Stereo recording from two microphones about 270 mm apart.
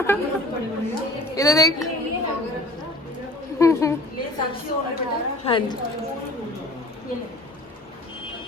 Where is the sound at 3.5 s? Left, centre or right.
Centre.